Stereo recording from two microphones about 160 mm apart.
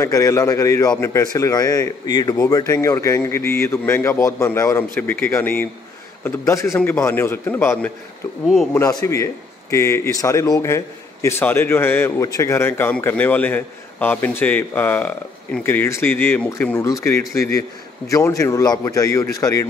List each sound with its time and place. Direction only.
0.0 s a man's voice: 20° left (ahead or behind)